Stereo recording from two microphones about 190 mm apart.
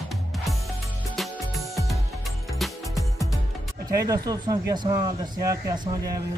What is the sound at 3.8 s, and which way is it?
Speech, 20° right (ahead or behind).